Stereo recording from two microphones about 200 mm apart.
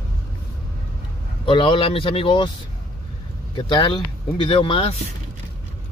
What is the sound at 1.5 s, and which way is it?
Speech, 25° left (ahead or behind).